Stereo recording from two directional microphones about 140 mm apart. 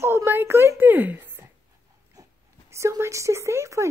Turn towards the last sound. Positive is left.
turn(degrees=-20)  # may be behind; listen again after turning